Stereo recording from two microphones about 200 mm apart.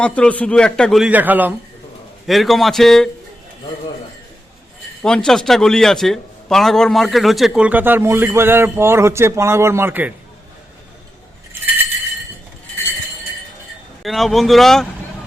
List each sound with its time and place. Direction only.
0.0 s a man's voice: 5° left (ahead or behind)
5.0 s a man's voice: 5° left (ahead or behind)
14.0 s a man's voice: centre (ahead or behind)